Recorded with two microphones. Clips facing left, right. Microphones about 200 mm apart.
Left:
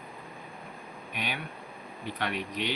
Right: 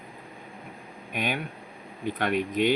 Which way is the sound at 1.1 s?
50° right (ahead or behind).